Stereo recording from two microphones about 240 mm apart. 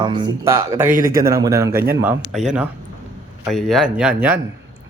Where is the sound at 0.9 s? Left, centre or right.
Right.